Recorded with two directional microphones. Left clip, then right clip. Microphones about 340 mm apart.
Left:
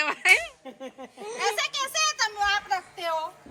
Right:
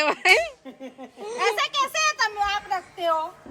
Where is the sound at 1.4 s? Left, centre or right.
Centre.